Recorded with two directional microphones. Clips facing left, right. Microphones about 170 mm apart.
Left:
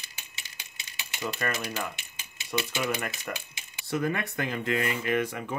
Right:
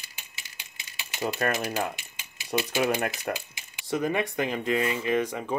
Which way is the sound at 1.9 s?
20° left (ahead or behind).